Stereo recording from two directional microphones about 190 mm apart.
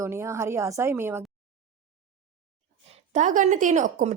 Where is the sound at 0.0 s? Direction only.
15° right (ahead or behind).